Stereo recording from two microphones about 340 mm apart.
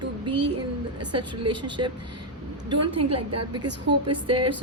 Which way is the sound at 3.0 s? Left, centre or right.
Right.